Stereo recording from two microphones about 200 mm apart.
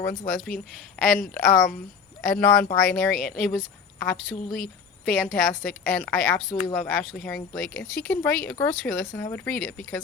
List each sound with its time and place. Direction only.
0.3 s a woman's voice: centre (ahead or behind)
6.5 s speech: 25° left (ahead or behind)
6.7 s speech: 5° left (ahead or behind)